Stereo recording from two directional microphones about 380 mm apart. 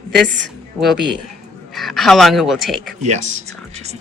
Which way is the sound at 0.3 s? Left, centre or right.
Right.